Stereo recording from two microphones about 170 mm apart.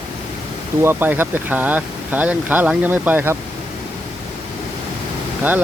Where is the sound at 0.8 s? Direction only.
10° right (ahead or behind).